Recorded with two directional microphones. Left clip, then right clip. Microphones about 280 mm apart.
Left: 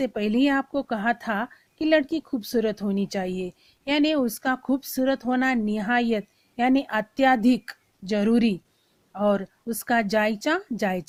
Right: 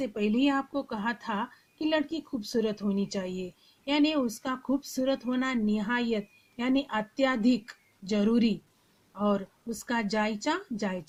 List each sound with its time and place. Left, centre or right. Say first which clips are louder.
0.0 s a woman's voice: left 4 dB; left